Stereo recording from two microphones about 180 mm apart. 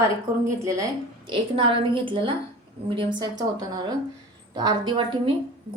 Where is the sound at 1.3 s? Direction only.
30° right (ahead or behind).